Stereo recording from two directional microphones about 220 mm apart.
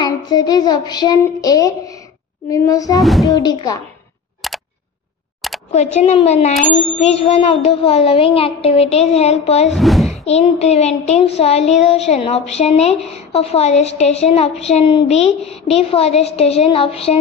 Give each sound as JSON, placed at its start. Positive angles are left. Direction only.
{"t": 0.0, "sound": "child singing", "side_deg": 20}
{"t": 2.5, "sound": "speech", "side_deg": 15}
{"t": 3.0, "sound": "speech", "side_deg": 0}
{"t": 3.3, "sound": "speech", "side_deg": 20}
{"t": 4.4, "sound": "a sound", "side_deg": 0}
{"t": 5.9, "sound": "child singing", "side_deg": 30}
{"t": 9.7, "sound": "speech", "side_deg": 0}
{"t": 10.1, "sound": "child singing", "side_deg": 30}